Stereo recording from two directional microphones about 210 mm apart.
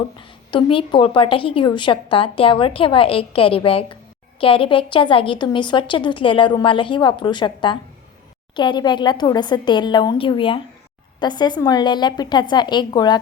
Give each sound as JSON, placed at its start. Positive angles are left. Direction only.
{"t": 0.2, "sound": "a woman's voice", "side_deg": 25}